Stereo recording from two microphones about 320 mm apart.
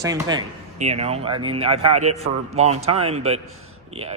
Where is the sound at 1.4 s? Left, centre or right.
Right.